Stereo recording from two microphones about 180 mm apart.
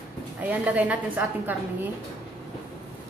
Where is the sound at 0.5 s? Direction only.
10° right (ahead or behind).